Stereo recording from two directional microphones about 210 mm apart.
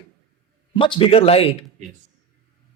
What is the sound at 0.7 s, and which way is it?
Speech, 25° left (ahead or behind).